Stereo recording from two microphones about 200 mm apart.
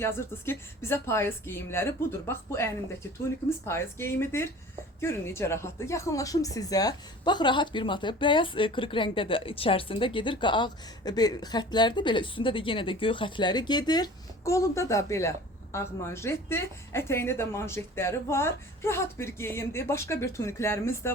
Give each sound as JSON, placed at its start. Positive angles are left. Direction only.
{"t": 0.0, "sound": "speech", "side_deg": 10}